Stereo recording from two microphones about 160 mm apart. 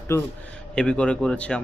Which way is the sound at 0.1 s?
15° left (ahead or behind).